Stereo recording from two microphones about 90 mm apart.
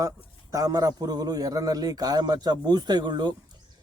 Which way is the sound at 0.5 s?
40° right (ahead or behind).